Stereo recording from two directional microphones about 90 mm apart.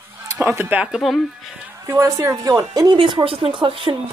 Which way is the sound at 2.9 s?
65° right (ahead or behind).